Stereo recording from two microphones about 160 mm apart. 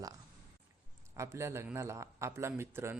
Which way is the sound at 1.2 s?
15° right (ahead or behind).